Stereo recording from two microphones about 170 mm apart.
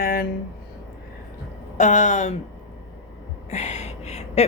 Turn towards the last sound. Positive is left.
turn(degrees=40)  # may be behind; listen again after turning